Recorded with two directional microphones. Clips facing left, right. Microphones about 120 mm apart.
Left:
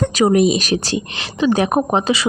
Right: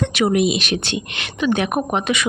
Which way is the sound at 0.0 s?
40° left (ahead or behind).